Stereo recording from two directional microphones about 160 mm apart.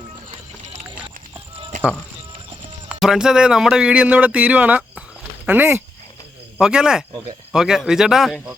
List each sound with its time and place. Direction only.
0.3 s run: 45° right (ahead or behind)
2.9 s speech: 5° right (ahead or behind)